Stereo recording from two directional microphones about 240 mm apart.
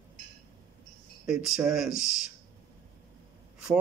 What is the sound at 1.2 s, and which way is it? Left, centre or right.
Speech, centre.